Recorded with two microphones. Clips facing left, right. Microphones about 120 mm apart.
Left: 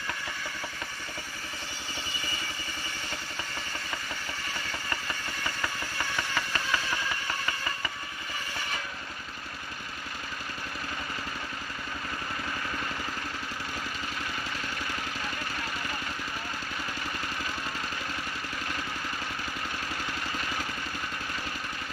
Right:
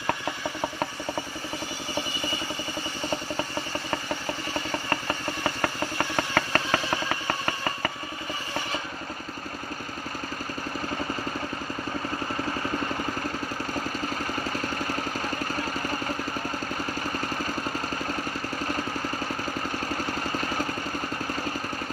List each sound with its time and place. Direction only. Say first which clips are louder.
4.9 s a sound: right 7 dB; 50° right (ahead or behind)
14.6 s vehicle: right 6 dB; 40° right (ahead or behind)
20.1 s vehicle: right 5 dB; 40° right (ahead or behind)